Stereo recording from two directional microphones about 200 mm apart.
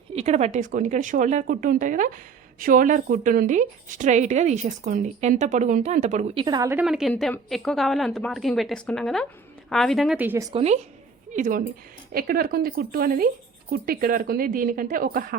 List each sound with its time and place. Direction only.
0.1 s speech: 30° right (ahead or behind); by 6.8 s 15° right (ahead or behind)
6.8 s a woman's voice: centre (ahead or behind)
10.5 s speech: 30° right (ahead or behind); by 15.4 s 45° right (ahead or behind)